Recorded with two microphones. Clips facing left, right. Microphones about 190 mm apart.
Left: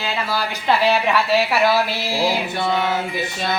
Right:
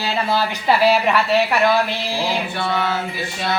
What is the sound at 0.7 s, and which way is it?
A woman's voice, centre (ahead or behind).